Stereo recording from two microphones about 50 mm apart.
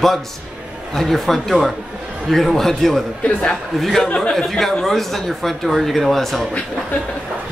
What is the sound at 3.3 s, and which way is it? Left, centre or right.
Speech, left.